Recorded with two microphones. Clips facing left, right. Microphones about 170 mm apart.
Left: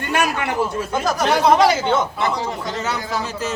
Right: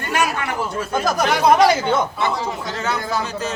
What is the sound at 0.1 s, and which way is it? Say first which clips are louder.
Speech: left 1 dB; 25° left (ahead or behind).